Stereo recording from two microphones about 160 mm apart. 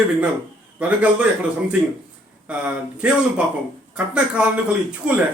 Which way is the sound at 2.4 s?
10° right (ahead or behind).